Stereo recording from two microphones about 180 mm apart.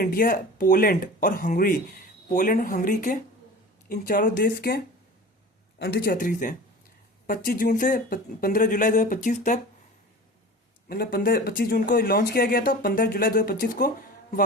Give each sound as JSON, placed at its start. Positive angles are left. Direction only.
{"t": 0.0, "sound": "speech", "side_deg": 50}
{"t": 5.8, "sound": "speech", "side_deg": 60}
{"t": 10.8, "sound": "speech", "side_deg": 55}